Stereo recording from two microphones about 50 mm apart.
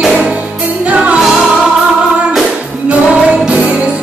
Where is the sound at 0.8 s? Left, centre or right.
Right.